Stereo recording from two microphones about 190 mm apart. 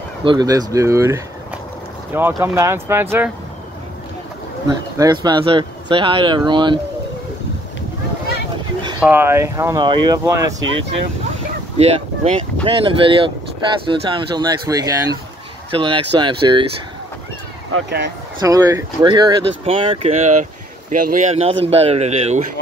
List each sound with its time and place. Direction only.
0.2 s speech: 25° right (ahead or behind)
4.6 s speech: 20° right (ahead or behind)
9.0 s speech: 10° right (ahead or behind)
11.7 s speech: 35° right (ahead or behind)
17.8 s speech: 65° right (ahead or behind)
18.4 s speech: 20° right (ahead or behind); by 22.5 s 35° right (ahead or behind)